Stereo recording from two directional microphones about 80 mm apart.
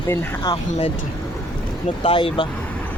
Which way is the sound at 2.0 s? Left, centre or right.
Left.